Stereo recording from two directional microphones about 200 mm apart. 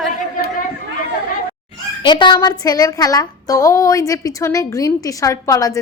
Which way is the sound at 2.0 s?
25° left (ahead or behind).